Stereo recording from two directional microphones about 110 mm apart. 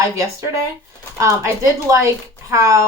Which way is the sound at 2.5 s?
25° right (ahead or behind).